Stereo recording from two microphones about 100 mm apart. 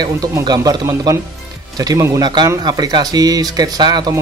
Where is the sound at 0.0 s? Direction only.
40° right (ahead or behind).